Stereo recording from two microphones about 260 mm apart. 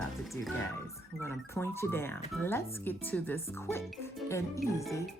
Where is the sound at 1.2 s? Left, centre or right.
Centre.